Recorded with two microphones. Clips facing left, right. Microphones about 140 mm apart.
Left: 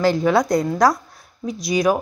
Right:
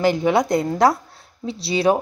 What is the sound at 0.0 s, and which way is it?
Speech, 20° right (ahead or behind).